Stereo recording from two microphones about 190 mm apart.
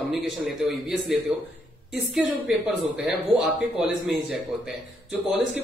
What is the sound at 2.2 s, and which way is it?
A man's voice, 5° right (ahead or behind).